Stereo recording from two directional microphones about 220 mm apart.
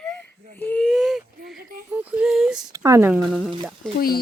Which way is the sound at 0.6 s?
5° left (ahead or behind).